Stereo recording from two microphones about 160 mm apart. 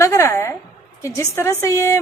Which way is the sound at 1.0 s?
20° left (ahead or behind).